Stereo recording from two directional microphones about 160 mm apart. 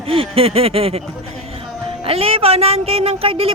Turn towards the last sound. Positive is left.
turn(degrees=-35)  # may be behind; listen again after turning